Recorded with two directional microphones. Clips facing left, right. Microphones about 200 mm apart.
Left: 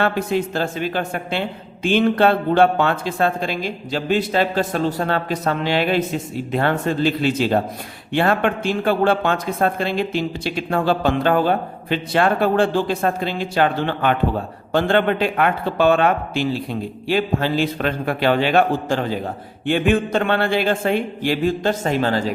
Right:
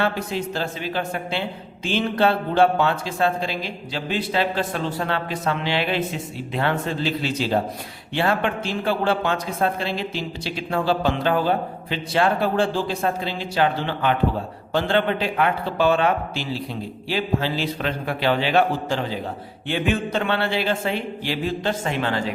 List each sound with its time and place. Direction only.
0.0 s a man's voice: 55° left (ahead or behind); by 22.3 s 40° left (ahead or behind)